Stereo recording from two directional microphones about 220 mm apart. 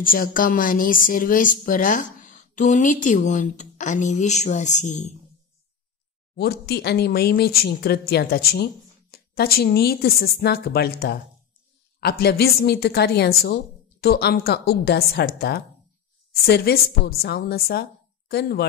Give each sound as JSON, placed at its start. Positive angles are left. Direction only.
{"t": 0.0, "sound": "a woman's voice", "side_deg": 40}
{"t": 6.3, "sound": "speech", "side_deg": 45}